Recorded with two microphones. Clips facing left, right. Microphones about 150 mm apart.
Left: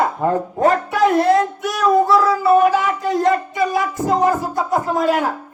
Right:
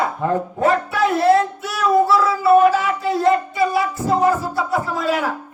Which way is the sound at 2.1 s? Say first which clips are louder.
Even; 40° left (ahead or behind).